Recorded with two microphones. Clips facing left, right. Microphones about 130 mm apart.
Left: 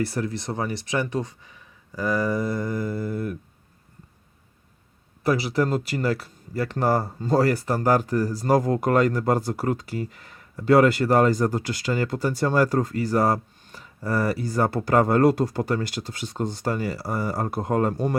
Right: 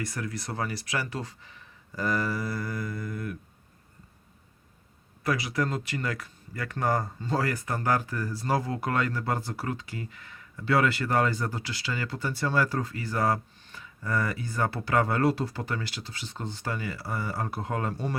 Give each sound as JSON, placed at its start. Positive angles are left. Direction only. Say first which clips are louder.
{"t": 0.0, "sound": "speech", "louder": "left 8 dB", "side_deg": 30}
{"t": 5.2, "sound": "speech", "louder": "left 6 dB", "side_deg": 30}